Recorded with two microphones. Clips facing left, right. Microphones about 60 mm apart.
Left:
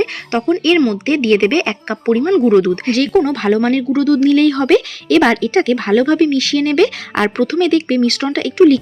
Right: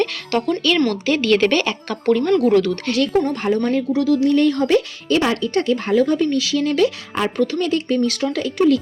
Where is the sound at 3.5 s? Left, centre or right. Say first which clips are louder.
Left 4 dB; left.